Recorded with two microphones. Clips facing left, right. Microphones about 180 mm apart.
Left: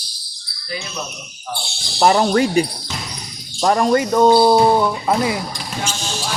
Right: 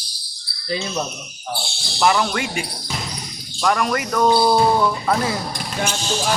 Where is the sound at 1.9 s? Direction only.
40° left (ahead or behind); by 5.4 s 15° left (ahead or behind).